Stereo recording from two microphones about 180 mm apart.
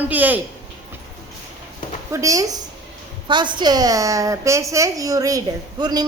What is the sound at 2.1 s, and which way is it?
A woman's voice, 15° right (ahead or behind).